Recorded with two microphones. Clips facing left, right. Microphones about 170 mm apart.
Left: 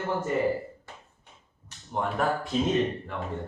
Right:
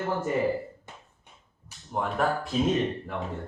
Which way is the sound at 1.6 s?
Centre (ahead or behind).